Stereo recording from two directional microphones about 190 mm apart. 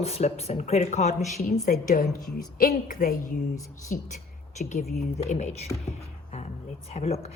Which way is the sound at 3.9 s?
40° left (ahead or behind).